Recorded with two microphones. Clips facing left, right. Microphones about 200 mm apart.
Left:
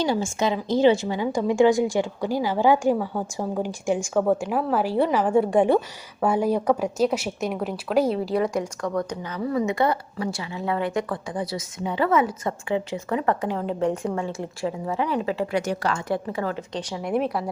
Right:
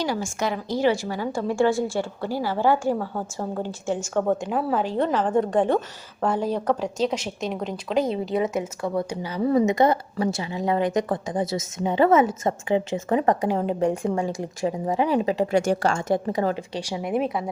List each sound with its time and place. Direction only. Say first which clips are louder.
0.0 s a woman's voice: left 3 dB; 25° left (ahead or behind); by 9.4 s 10° right (ahead or behind)
9.6 s a woman's voice: right 3 dB; 20° right (ahead or behind)
15.7 s a woman's voice: right 4 dB; 30° right (ahead or behind)
16.1 s a woman's voice: right 4 dB; 20° right (ahead or behind)
16.7 s speech: even; 5° right (ahead or behind)